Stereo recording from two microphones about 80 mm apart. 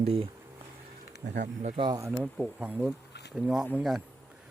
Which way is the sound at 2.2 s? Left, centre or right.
Centre.